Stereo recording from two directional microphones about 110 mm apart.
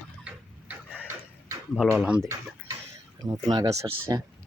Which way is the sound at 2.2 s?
30° right (ahead or behind).